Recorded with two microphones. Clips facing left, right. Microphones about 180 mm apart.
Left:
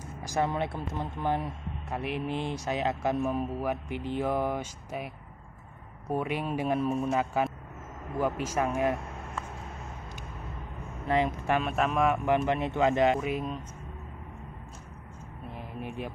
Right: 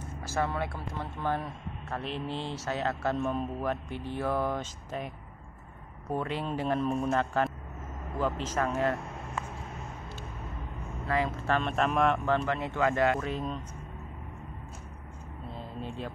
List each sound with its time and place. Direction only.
0.2 s speech: 15° left (ahead or behind)
11.1 s speech: 20° left (ahead or behind)
12.3 s speech: 20° left (ahead or behind)
15.5 s a sound: 15° left (ahead or behind)